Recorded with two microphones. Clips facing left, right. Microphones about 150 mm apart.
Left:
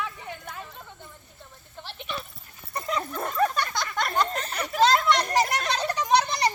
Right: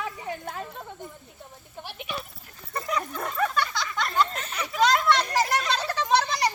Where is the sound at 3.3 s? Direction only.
40° left (ahead or behind).